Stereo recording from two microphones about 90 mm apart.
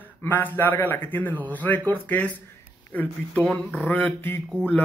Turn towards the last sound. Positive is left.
turn(degrees=15)  # may be behind; listen again after turning